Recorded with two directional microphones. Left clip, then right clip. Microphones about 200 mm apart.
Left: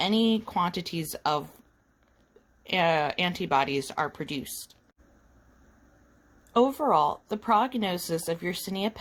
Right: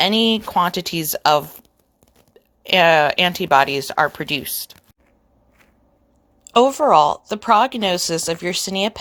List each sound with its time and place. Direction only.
0.0 s a woman's voice: 20° right (ahead or behind)
2.6 s a woman's voice: 20° right (ahead or behind)
6.5 s a woman's voice: 20° right (ahead or behind)